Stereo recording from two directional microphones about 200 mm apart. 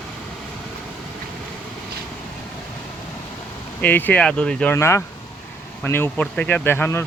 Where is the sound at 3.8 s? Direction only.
10° left (ahead or behind).